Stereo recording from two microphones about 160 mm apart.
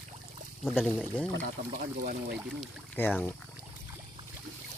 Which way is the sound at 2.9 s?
15° left (ahead or behind).